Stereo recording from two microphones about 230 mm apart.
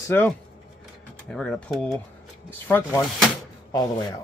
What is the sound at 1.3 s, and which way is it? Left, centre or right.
Speech, centre.